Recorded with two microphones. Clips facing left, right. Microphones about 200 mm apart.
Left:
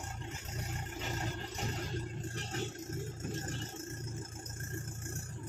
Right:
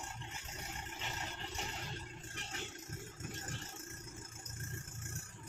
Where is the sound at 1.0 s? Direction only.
40° left (ahead or behind).